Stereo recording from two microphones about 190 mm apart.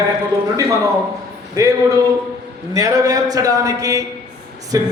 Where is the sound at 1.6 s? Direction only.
20° right (ahead or behind).